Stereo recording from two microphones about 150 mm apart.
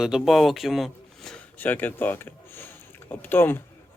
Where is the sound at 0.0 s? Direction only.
Centre (ahead or behind).